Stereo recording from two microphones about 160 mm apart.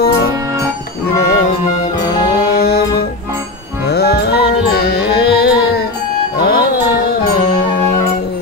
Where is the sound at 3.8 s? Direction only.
90° left.